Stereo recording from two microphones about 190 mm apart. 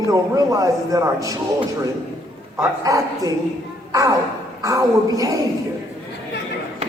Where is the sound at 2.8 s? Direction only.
20° right (ahead or behind).